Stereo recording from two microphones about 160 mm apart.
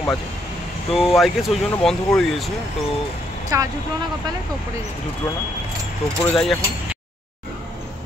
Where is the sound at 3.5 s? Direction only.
20° right (ahead or behind).